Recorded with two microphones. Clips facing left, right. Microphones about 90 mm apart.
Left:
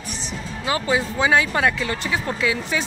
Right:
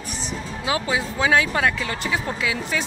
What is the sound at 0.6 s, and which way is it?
Speech, 5° right (ahead or behind).